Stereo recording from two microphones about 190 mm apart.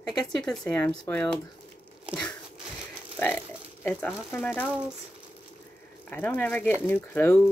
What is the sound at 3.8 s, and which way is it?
Speech, 10° left (ahead or behind).